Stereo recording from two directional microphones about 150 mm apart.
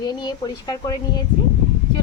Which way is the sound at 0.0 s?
25° left (ahead or behind).